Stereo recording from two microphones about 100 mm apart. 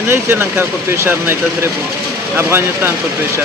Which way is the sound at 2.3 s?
25° right (ahead or behind).